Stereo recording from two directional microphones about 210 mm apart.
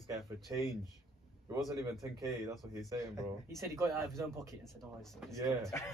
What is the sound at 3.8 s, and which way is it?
Speech, 15° right (ahead or behind).